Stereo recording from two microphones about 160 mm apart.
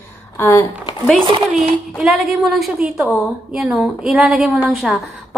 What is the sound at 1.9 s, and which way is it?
A woman's voice, centre (ahead or behind).